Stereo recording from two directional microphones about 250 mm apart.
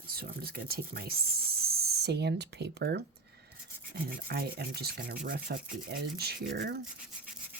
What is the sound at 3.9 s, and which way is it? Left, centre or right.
Rub, right.